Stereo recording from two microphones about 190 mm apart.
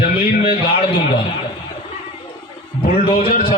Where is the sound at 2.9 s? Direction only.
30° left (ahead or behind).